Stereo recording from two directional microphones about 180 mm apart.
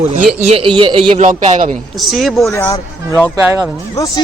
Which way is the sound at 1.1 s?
45° right (ahead or behind).